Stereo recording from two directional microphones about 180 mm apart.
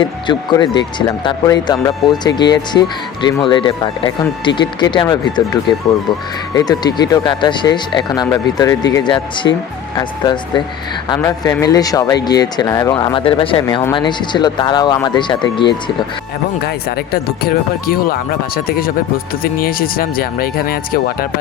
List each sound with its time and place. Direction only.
0.0 s speech: 25° left (ahead or behind)
6.5 s speech: 20° left (ahead or behind)
16.6 s speech: 60° left (ahead or behind)